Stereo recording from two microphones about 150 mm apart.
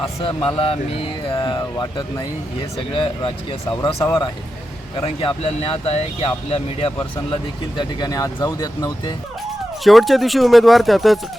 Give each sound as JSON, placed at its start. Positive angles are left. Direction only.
{"t": 0.4, "sound": "speech", "side_deg": 40}
{"t": 7.8, "sound": "speech", "side_deg": 25}
{"t": 9.8, "sound": "speech", "side_deg": 0}